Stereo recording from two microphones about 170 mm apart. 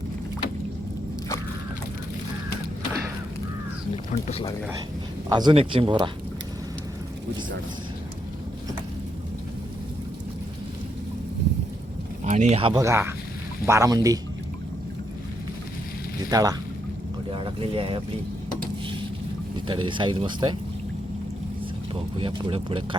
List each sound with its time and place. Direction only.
4.1 s speech: 35° left (ahead or behind)
5.3 s speech: 25° right (ahead or behind)
12.2 s speech: 45° right (ahead or behind)
12.8 s speech: 15° right (ahead or behind)
16.3 s speech: 20° right (ahead or behind)
17.3 s speech: 30° right (ahead or behind)
19.6 s speech: 30° right (ahead or behind)
21.9 s speech: 30° right (ahead or behind)